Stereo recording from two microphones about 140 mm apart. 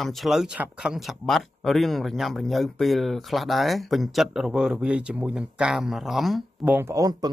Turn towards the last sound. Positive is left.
turn(degrees=-25)  # may be behind; listen again after turning